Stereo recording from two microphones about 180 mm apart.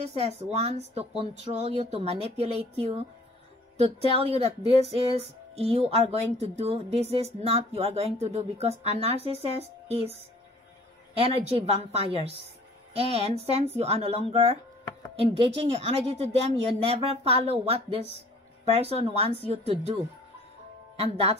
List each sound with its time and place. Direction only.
0.0 s speech: 35° right (ahead or behind)
11.1 s speech: 30° right (ahead or behind)